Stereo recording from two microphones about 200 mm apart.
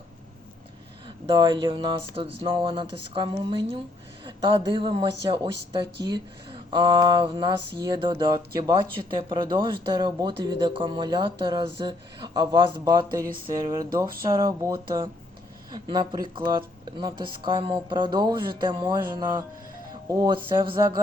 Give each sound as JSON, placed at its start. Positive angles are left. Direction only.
{"t": 1.0, "sound": "speech", "side_deg": -25}